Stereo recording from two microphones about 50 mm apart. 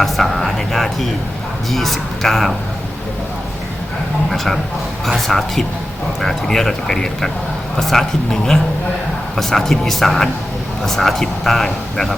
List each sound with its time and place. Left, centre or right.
0.0 s speech: centre
4.3 s speech: centre